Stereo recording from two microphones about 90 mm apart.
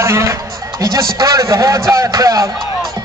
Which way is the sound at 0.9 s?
40° right (ahead or behind).